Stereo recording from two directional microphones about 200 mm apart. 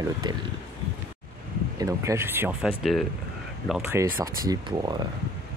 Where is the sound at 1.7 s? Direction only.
15° right (ahead or behind).